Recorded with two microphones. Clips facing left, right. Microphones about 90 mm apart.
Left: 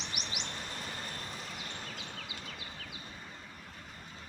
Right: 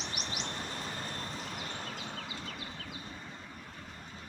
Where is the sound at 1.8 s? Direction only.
45° right (ahead or behind).